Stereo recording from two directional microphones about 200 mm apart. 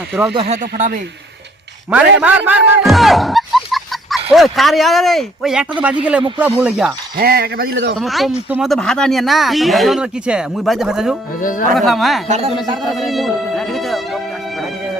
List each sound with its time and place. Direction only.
0.1 s speech: 10° right (ahead or behind)
0.3 s speech: 30° right (ahead or behind)
2.1 s speech: 10° right (ahead or behind)
7.2 s a man's voice: 50° right (ahead or behind)
7.9 s speech: centre (ahead or behind)
11.3 s speech: 40° left (ahead or behind)
11.7 s speech: centre (ahead or behind)